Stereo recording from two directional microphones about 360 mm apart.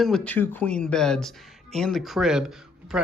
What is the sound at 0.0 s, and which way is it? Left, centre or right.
Speech, centre.